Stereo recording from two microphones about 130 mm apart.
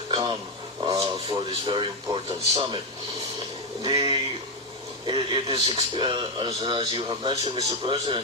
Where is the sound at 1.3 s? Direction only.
40° right (ahead or behind).